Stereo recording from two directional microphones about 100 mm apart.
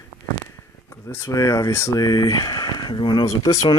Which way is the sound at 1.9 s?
45° left (ahead or behind).